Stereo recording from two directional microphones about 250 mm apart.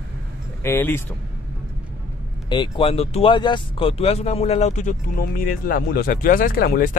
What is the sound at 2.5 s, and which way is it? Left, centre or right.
Speech, centre.